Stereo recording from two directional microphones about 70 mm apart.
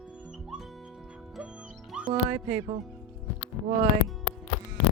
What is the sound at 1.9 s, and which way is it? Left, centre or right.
Music, centre.